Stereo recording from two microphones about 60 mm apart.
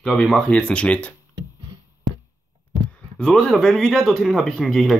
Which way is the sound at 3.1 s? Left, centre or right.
Centre.